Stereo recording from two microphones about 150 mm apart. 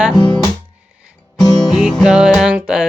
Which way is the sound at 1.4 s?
30° left (ahead or behind).